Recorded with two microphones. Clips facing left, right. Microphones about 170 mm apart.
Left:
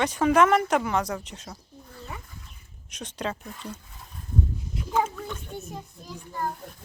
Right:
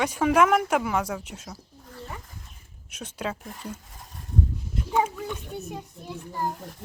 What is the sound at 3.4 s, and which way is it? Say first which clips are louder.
Speech: even; 45° right (ahead or behind).